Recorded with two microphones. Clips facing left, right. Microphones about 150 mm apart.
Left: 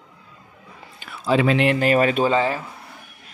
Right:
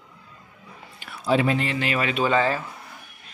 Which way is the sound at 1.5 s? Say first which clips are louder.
Left 6 dB; 70° left (ahead or behind).